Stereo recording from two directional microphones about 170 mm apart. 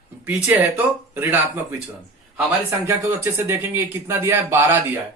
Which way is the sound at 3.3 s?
15° right (ahead or behind).